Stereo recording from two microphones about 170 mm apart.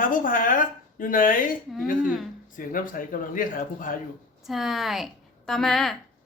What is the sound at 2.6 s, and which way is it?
A woman's voice, 55° left (ahead or behind).